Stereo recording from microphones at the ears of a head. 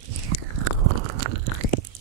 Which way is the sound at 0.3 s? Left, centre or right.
Right.